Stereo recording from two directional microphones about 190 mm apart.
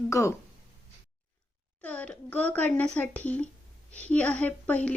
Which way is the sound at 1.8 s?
5° left (ahead or behind).